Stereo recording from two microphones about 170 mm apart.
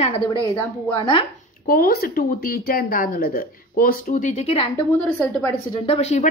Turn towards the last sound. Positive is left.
turn(degrees=40)  # may be behind; listen again after turning